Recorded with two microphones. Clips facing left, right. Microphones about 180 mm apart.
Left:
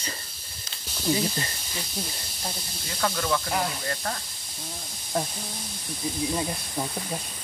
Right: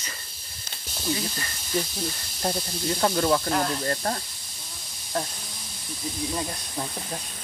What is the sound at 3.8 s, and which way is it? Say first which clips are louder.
Speech: right 4 dB; 35° right (ahead or behind).